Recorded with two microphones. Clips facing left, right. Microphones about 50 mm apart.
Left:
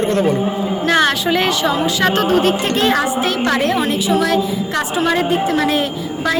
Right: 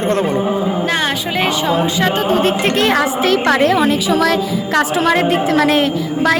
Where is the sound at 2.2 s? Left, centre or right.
Right.